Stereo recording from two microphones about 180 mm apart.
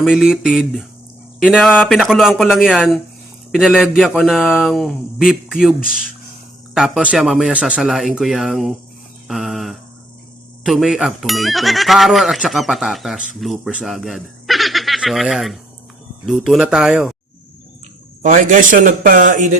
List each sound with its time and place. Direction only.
0.0 s speech: centre (ahead or behind)
9.2 s a sound: centre (ahead or behind)
10.6 s speech: centre (ahead or behind)
18.2 s a man's voice: 45° right (ahead or behind)